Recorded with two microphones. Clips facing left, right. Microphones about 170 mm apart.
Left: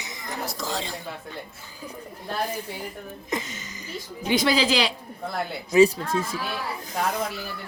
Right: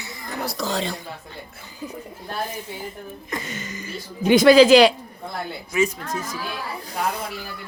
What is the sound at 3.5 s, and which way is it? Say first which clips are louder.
A woman's voice: right 6 dB; 60° right (ahead or behind).